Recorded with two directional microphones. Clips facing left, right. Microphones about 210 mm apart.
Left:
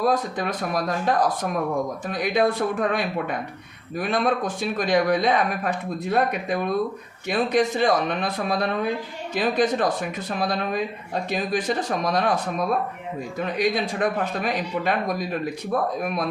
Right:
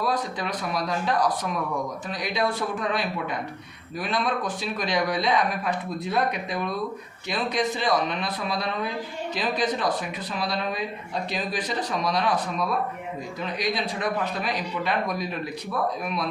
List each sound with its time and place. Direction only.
0.0 s speech: 50° left (ahead or behind)